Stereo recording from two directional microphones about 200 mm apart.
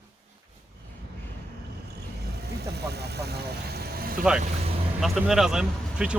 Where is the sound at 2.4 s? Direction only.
55° right (ahead or behind).